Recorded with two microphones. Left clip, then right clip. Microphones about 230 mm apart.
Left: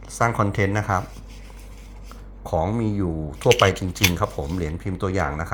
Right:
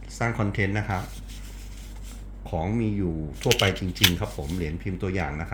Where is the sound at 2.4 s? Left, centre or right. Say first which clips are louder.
Left 5 dB; centre.